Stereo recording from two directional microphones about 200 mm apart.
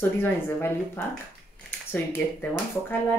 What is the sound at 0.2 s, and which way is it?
Speech, 10° left (ahead or behind).